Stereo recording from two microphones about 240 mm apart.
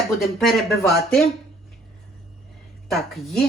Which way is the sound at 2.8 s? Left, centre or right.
Centre.